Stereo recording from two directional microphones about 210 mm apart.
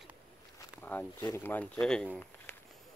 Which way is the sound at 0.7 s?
10° left (ahead or behind).